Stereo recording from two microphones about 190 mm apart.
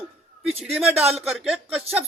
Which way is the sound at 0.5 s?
30° right (ahead or behind).